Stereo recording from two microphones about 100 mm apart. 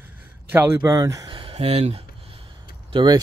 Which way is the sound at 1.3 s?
60° right (ahead or behind).